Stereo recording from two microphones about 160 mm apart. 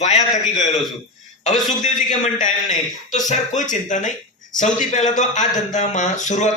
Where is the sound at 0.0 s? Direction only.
45° left (ahead or behind).